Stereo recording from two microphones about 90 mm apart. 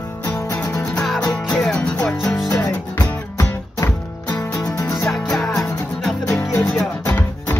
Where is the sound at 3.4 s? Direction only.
35° left (ahead or behind).